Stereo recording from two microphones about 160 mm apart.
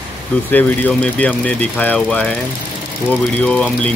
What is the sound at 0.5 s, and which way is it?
Speech, 10° left (ahead or behind).